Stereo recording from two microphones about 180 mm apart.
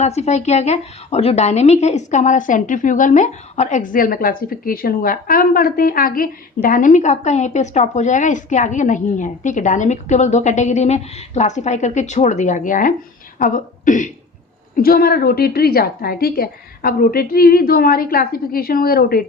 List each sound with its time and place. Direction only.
0.0 s a woman's voice: 35° left (ahead or behind); by 19.2 s 55° left (ahead or behind)